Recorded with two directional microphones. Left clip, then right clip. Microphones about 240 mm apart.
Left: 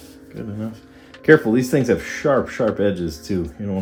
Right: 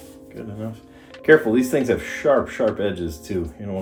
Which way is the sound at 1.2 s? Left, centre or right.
Left.